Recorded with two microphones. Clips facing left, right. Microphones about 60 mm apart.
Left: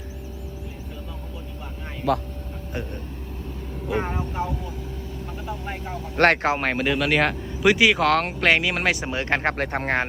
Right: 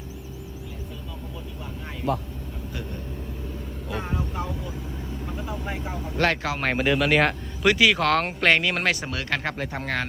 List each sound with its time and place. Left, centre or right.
2.1 s speech: left
5.3 s speech: centre
6.1 s speech: left
6.6 s speech: centre
7.6 s speech: centre
7.9 s speech: centre
9.1 s speech: left